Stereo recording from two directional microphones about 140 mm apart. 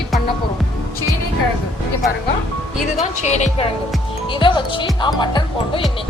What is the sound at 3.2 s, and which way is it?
Speech, 55° left (ahead or behind).